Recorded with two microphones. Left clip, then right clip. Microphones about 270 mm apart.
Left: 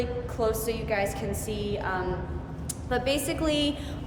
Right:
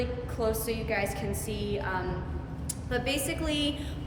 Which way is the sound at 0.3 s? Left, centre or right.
Centre.